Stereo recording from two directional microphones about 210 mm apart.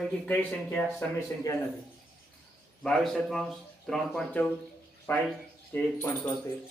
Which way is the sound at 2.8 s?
Centre (ahead or behind).